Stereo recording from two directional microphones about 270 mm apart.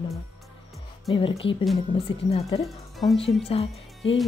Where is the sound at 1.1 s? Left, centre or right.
Centre.